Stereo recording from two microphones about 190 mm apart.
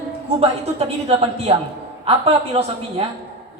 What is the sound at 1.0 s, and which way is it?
A man's voice, 30° right (ahead or behind).